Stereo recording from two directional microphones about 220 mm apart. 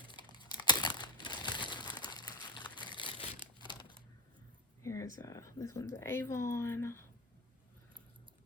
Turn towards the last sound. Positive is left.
turn(degrees=10)  # may be behind; listen again after turning